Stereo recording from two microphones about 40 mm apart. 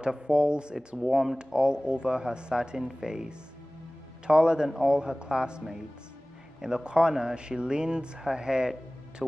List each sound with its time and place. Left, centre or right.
0.0 s speech: right